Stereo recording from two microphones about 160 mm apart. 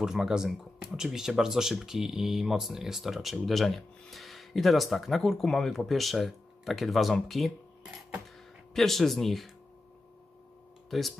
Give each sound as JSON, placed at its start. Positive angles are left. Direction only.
{"t": 0.0, "sound": "speech", "side_deg": -5}
{"t": 8.7, "sound": "speech", "side_deg": 0}
{"t": 10.9, "sound": "speech", "side_deg": 0}